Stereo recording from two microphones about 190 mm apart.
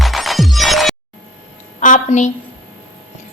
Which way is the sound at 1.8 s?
40° left (ahead or behind).